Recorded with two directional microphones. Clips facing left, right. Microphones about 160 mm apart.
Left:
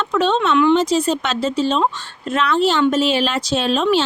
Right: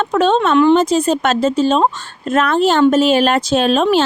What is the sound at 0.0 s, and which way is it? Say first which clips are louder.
Speech: right 4 dB; 50° right (ahead or behind).